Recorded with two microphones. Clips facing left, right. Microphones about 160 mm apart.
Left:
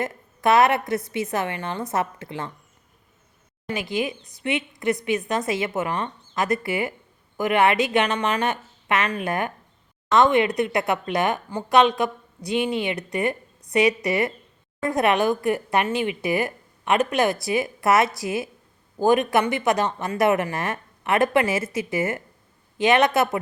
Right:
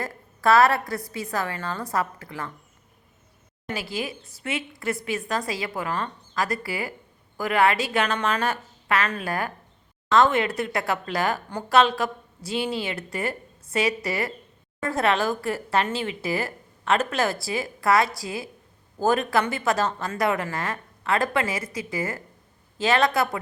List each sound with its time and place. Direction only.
0.0 s speech: 20° left (ahead or behind)
4.7 s a woman's voice: 20° left (ahead or behind)